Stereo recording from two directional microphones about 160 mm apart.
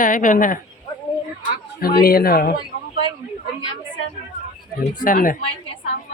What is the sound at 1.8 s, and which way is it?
Speech, 65° left (ahead or behind).